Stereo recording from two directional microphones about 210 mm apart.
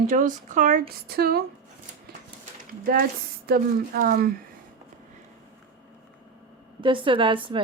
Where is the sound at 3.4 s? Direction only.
45° right (ahead or behind).